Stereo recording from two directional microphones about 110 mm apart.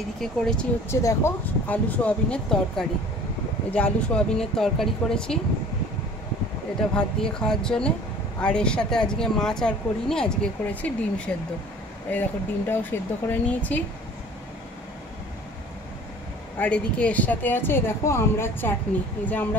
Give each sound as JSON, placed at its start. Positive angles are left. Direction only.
{"t": 0.2, "sound": "speech", "side_deg": 5}
{"t": 0.8, "sound": "speech", "side_deg": 25}
{"t": 7.0, "sound": "speech", "side_deg": 5}
{"t": 16.5, "sound": "speech", "side_deg": 10}